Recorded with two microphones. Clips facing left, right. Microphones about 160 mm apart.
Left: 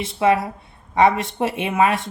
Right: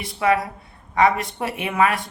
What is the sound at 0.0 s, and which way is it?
Speech, 25° left (ahead or behind).